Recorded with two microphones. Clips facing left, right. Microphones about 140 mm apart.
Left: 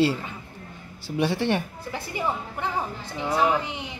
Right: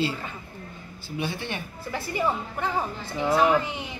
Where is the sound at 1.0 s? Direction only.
75° left (ahead or behind).